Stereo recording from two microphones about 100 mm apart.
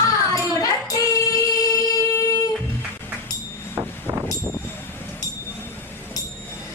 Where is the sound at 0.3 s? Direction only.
35° left (ahead or behind).